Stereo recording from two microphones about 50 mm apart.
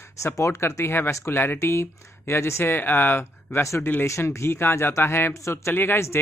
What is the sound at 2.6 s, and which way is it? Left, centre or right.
A man's voice, left.